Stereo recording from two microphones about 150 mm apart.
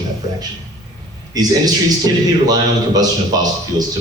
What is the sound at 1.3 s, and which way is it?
A man's voice, 25° right (ahead or behind).